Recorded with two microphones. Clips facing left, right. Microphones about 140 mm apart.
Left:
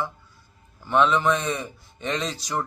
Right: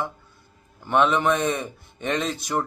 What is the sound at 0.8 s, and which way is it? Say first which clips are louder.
Speech: even; 15° right (ahead or behind).